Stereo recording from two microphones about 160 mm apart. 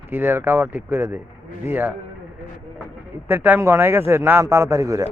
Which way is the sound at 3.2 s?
10° right (ahead or behind).